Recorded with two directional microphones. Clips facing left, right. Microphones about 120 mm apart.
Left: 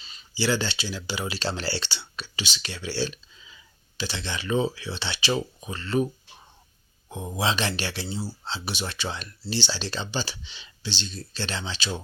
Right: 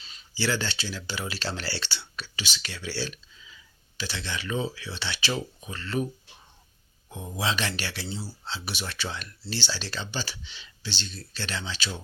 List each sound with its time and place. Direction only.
0.3 s speech: 15° left (ahead or behind)
7.1 s speech: 25° left (ahead or behind)